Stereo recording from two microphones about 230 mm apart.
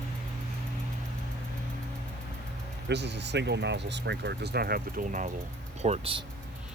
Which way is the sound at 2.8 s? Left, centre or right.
Right.